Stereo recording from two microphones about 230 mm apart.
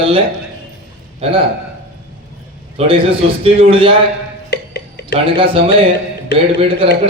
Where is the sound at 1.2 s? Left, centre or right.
Right.